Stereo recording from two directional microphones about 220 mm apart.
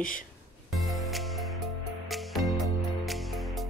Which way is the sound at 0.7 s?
Centre (ahead or behind).